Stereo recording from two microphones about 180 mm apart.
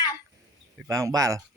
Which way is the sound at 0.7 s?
15° right (ahead or behind).